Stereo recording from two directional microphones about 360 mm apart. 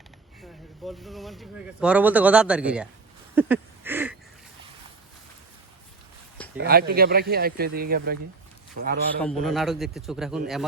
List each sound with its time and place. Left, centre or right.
0.9 s speech: centre
3.3 s a sound: centre
6.6 s speech: right
9.1 s speech: centre